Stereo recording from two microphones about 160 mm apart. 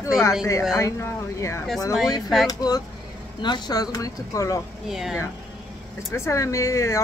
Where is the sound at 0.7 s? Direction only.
20° left (ahead or behind).